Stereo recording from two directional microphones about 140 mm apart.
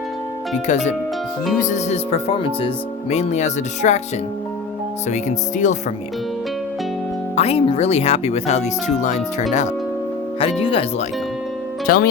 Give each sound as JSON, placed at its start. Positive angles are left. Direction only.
{"t": 0.5, "sound": "speech", "side_deg": 55}
{"t": 5.0, "sound": "speech", "side_deg": 60}
{"t": 7.3, "sound": "speech", "side_deg": 45}
{"t": 10.4, "sound": "speech", "side_deg": 40}
{"t": 11.9, "sound": "speech", "side_deg": 90}